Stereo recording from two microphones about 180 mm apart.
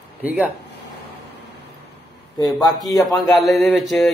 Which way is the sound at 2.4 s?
20° left (ahead or behind).